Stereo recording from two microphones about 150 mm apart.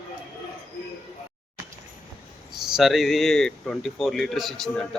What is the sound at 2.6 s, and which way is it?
Speech, centre (ahead or behind).